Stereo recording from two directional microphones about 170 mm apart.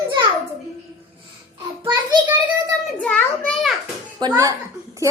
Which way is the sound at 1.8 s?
25° right (ahead or behind).